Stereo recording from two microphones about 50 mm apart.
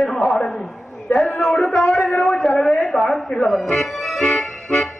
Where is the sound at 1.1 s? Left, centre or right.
Left.